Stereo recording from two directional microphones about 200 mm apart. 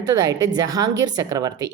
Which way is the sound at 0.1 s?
20° right (ahead or behind).